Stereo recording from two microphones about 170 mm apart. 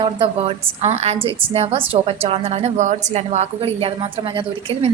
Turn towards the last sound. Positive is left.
turn(degrees=-30)  # may be behind; listen again after turning